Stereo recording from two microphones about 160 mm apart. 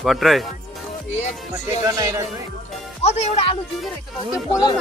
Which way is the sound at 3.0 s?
40° left (ahead or behind).